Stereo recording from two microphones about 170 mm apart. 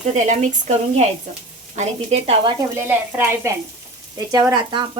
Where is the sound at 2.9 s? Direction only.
15° right (ahead or behind).